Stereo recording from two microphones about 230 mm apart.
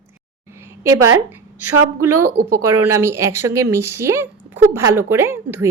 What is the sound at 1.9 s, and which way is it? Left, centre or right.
Speech, right.